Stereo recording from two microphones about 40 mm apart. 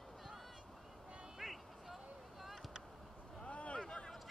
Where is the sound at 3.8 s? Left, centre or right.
Centre.